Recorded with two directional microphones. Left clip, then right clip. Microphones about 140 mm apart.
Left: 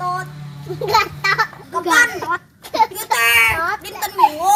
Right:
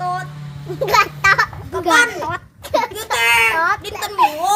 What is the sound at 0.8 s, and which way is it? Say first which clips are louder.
Babbling: right 3 dB; 25° right (ahead or behind).